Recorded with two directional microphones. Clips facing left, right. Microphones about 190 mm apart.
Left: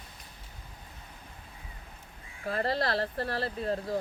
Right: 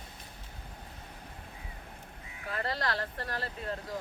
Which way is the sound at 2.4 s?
35° left (ahead or behind).